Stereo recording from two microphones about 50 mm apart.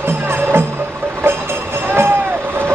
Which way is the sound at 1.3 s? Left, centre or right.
Right.